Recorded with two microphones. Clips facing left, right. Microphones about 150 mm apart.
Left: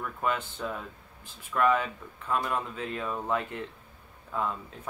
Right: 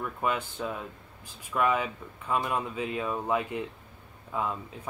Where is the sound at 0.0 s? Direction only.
10° right (ahead or behind).